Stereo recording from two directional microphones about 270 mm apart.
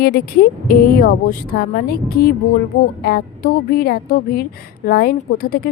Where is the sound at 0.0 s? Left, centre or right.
Left.